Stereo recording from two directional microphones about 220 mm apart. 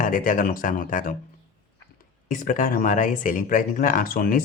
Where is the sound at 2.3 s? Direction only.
35° left (ahead or behind).